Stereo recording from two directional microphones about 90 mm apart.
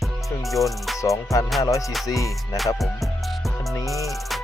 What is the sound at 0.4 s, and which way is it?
Music, centre (ahead or behind).